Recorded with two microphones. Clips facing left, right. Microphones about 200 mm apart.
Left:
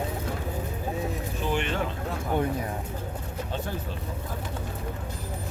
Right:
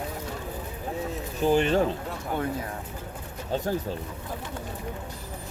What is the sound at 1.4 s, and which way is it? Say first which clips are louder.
Speech: right 7 dB; 40° right (ahead or behind).